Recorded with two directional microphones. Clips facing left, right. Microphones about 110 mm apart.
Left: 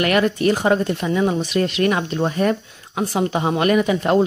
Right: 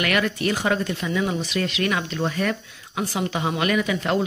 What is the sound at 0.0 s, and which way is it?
Speech, 35° left (ahead or behind).